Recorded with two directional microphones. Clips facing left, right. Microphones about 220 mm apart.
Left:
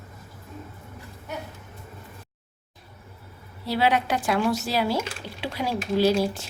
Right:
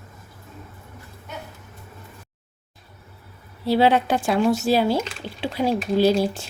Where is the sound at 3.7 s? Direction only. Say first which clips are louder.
Right 5 dB; 25° right (ahead or behind).